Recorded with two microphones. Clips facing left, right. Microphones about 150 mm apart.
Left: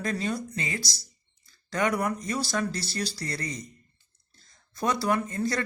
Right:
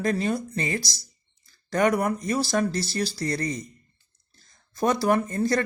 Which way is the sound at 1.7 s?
40° right (ahead or behind).